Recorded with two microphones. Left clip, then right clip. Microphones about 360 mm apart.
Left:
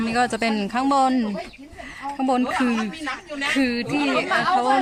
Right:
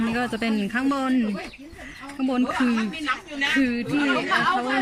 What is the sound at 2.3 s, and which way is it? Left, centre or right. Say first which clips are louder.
A woman's voice: left 2 dB; centre.